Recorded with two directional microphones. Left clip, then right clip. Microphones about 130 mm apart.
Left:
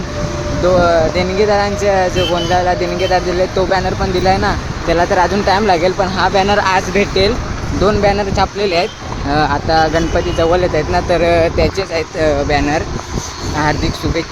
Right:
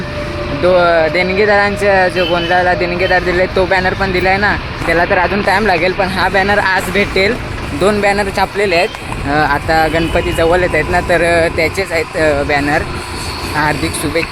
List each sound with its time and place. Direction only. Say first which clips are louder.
0.8 s speech: right 1 dB; 35° right (ahead or behind)
1.1 s speech: right 2 dB; centre (ahead or behind)